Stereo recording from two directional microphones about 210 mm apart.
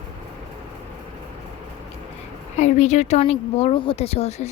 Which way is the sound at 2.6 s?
35° left (ahead or behind).